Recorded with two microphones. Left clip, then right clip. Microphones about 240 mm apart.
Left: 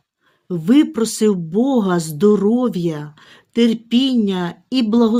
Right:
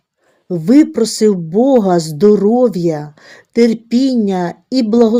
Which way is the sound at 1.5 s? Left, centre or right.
Centre.